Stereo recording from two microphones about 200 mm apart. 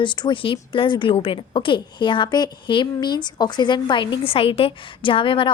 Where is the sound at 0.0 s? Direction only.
25° left (ahead or behind).